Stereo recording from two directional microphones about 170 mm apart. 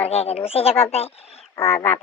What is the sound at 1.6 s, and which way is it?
Speech, 15° left (ahead or behind).